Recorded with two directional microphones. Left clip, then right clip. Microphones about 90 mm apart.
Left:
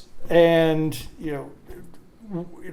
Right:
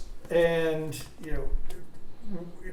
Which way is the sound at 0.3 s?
45° left (ahead or behind).